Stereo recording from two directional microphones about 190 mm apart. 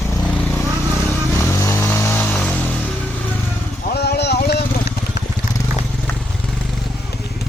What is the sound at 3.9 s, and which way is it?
Vehicle, 60° left (ahead or behind).